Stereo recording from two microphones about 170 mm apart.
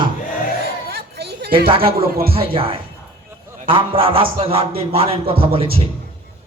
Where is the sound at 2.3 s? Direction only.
35° right (ahead or behind).